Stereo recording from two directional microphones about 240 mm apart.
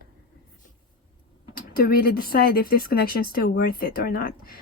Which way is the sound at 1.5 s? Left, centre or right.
Left.